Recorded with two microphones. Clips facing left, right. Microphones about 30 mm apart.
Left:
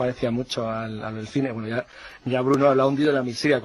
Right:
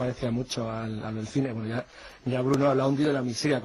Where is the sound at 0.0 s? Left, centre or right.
Left.